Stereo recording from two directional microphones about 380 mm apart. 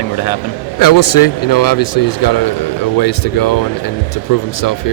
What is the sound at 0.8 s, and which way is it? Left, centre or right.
A man's voice, left.